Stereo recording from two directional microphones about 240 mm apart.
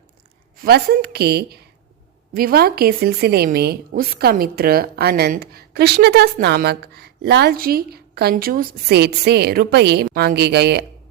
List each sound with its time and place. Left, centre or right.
0.6 s a woman's voice: right